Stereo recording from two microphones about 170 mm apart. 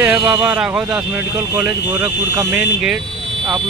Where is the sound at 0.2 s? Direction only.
20° right (ahead or behind).